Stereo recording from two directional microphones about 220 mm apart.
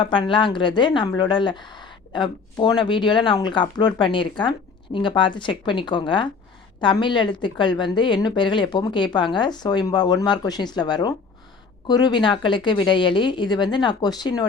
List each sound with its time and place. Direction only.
0.0 s a woman's voice: 20° left (ahead or behind)